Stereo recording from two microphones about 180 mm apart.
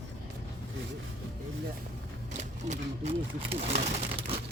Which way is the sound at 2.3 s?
40° right (ahead or behind).